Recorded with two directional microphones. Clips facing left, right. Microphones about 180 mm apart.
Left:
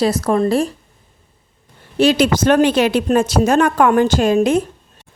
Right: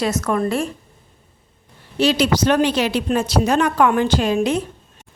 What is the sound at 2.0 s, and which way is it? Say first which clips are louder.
A woman's voice: left 3 dB; 50° left (ahead or behind).